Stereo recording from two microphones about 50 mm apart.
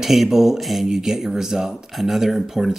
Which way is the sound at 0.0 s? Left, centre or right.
Centre.